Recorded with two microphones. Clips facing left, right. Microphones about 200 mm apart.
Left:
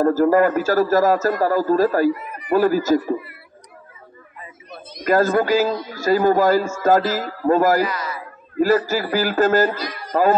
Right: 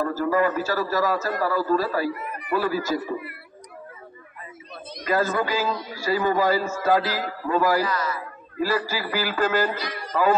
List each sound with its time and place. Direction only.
0.0 s a man's voice: 45° left (ahead or behind)
5.0 s a man's voice: 45° left (ahead or behind)
7.8 s a man's voice: 15° left (ahead or behind)
8.5 s a man's voice: 45° left (ahead or behind)